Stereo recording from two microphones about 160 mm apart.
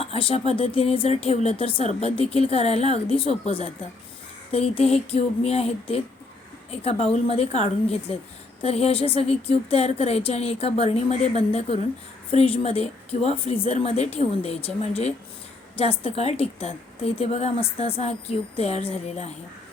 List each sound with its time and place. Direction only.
0.0 s speech: 35° left (ahead or behind)